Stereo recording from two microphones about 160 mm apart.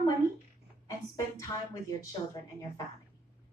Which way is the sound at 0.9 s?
20° left (ahead or behind).